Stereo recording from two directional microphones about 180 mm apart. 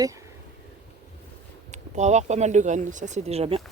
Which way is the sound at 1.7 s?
40° right (ahead or behind).